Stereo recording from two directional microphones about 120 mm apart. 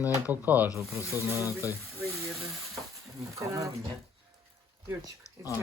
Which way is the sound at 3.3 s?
25° right (ahead or behind).